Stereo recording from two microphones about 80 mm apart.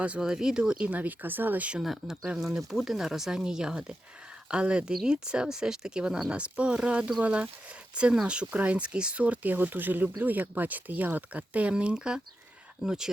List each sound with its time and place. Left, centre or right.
0.0 s speech: centre
1.8 s speech: centre